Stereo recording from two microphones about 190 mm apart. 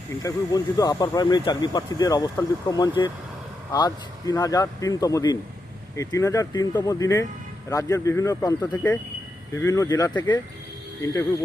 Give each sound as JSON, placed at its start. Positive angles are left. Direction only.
{"t": 0.2, "sound": "speech", "side_deg": 20}